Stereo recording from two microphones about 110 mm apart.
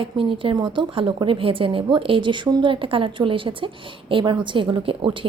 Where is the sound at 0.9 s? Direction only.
50° right (ahead or behind).